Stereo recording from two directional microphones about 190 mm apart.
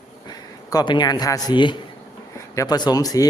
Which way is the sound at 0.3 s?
20° left (ahead or behind).